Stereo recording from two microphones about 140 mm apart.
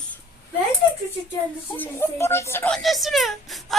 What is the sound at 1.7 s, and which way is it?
Speech, 15° left (ahead or behind).